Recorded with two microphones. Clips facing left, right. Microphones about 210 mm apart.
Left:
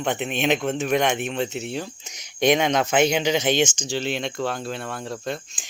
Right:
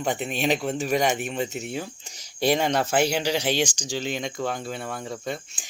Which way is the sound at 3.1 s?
10° right (ahead or behind).